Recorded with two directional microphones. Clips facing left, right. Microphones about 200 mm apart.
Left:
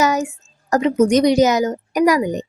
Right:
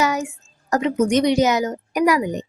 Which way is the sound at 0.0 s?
40° left (ahead or behind).